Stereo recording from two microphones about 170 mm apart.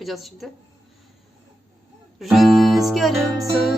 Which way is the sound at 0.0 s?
Centre (ahead or behind).